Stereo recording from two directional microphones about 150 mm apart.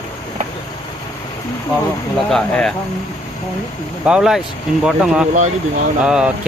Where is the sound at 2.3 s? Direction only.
5° left (ahead or behind).